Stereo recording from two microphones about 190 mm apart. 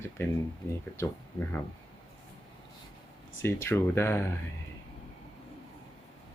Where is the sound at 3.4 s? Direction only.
15° left (ahead or behind).